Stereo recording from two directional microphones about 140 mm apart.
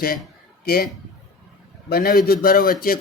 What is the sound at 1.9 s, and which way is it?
Speech, 90° left.